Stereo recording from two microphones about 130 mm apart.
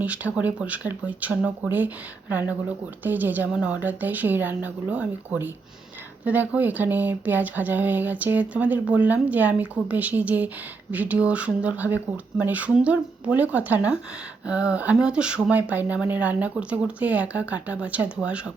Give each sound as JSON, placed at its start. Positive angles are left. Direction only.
{"t": 0.0, "sound": "speech", "side_deg": -10}
{"t": 3.0, "sound": "speech", "side_deg": -15}